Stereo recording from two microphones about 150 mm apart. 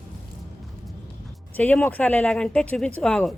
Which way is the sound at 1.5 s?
10° left (ahead or behind).